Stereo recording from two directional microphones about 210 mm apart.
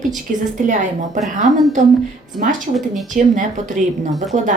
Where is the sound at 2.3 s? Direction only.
40° right (ahead or behind).